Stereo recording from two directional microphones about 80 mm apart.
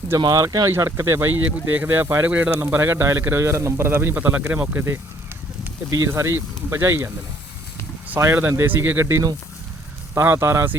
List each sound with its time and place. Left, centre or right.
0.2 s speech: right
0.9 s speech: right
5.9 s speech: right